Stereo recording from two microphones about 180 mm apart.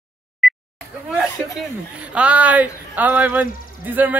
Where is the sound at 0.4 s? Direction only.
Centre (ahead or behind).